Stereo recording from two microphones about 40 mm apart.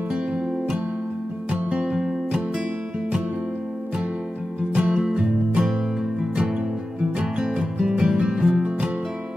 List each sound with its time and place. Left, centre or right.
1.5 s music: right
4.7 s music: right
7.2 s music: right